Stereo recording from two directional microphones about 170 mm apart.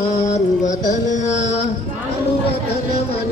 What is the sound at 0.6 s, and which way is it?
Carnatic music, 45° left (ahead or behind).